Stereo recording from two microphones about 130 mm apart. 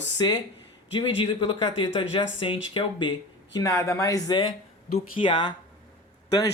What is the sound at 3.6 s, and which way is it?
Speech, 25° left (ahead or behind).